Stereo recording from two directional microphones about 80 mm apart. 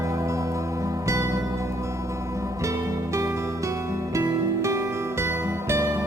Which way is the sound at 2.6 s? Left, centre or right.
Right.